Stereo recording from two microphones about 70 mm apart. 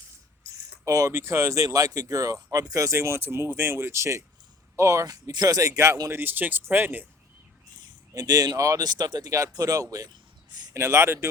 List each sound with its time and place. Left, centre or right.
0.5 s a sound: right
1.1 s speech: right
5.0 s speech: right
6.1 s speech: right
8.1 s speech: right
8.8 s speech: right
9.5 s speech: right
10.8 s speech: right